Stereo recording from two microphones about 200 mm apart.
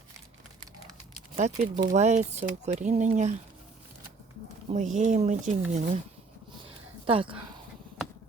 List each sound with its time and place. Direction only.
1.4 s speech: 35° right (ahead or behind)
4.7 s speech: 35° right (ahead or behind)
6.7 s a sound: 25° right (ahead or behind)